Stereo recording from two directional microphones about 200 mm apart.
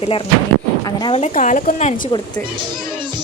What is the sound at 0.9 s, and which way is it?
Speech, 20° left (ahead or behind).